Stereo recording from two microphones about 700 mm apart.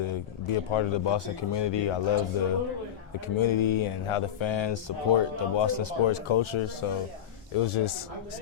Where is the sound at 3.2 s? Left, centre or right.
Left.